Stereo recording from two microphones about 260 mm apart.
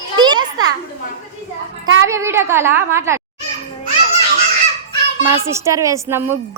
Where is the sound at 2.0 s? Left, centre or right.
Centre.